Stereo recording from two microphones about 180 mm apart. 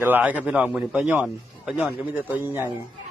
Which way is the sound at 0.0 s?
10° right (ahead or behind).